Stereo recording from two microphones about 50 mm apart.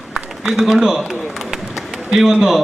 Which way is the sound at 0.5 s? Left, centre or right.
Centre.